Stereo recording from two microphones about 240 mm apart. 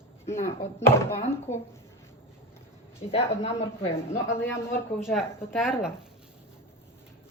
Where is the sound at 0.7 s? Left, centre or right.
Centre.